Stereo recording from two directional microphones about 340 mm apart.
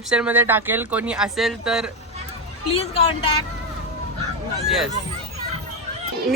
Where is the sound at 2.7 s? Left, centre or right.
Centre.